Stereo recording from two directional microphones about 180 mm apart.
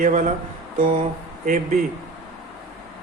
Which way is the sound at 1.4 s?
45° right (ahead or behind).